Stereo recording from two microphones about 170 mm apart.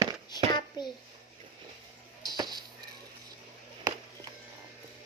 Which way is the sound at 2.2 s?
25° right (ahead or behind).